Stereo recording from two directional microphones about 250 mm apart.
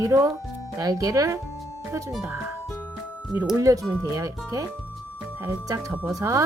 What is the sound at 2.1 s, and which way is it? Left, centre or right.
Music, centre.